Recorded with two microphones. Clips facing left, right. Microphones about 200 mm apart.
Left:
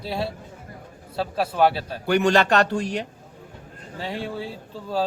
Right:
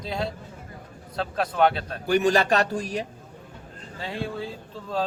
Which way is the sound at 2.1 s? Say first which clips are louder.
Left 2 dB; 70° left (ahead or behind).